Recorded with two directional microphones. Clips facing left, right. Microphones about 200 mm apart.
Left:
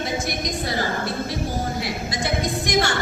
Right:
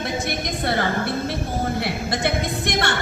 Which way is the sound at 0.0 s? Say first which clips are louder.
Even; 60° right (ahead or behind).